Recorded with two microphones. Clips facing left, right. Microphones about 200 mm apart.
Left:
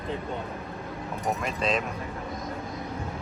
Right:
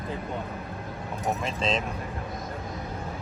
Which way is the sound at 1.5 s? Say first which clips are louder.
Left 2 dB; 25° right (ahead or behind).